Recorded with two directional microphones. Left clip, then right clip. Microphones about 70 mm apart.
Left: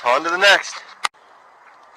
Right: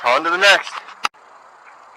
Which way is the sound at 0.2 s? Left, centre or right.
Left.